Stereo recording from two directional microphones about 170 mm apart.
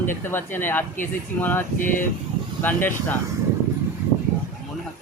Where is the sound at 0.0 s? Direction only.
15° left (ahead or behind).